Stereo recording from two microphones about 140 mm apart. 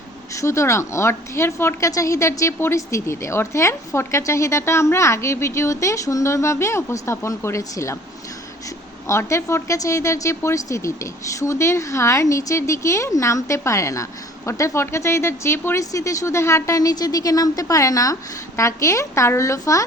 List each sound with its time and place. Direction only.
0.3 s a woman's voice: 20° left (ahead or behind)
9.0 s a woman's voice: 20° left (ahead or behind)